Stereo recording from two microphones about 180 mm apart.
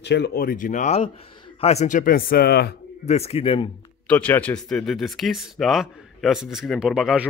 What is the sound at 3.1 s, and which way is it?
Speech, 35° left (ahead or behind).